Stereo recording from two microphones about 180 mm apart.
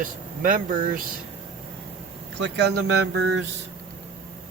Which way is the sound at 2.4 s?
75° right (ahead or behind).